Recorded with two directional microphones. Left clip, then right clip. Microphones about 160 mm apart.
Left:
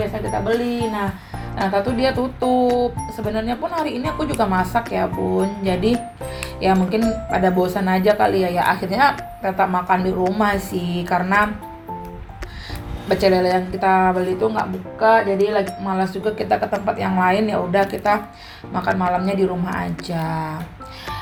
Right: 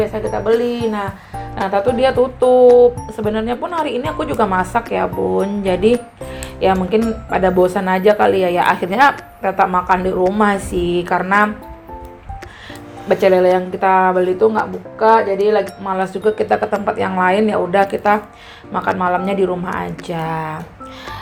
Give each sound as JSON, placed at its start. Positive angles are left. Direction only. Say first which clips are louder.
{"t": 0.0, "sound": "speech", "louder": "right 4 dB", "side_deg": -30}
{"t": 13.1, "sound": "speech", "louder": "right 5 dB", "side_deg": -25}